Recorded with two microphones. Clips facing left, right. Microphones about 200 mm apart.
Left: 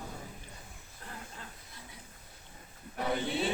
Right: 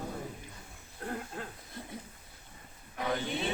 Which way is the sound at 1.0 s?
50° right (ahead or behind).